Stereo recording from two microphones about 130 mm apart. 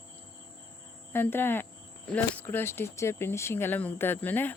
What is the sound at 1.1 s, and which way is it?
A woman's voice, 15° left (ahead or behind).